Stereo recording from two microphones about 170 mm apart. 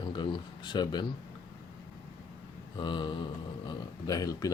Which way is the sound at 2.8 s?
30° left (ahead or behind).